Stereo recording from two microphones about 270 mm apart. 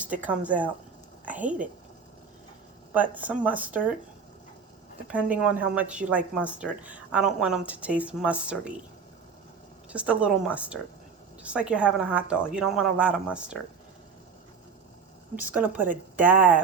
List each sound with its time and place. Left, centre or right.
0.2 s a woman's voice: centre
2.9 s speech: centre
5.0 s speech: centre
9.9 s speech: centre
15.4 s speech: centre